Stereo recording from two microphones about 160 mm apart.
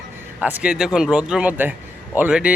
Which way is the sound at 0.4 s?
10° right (ahead or behind).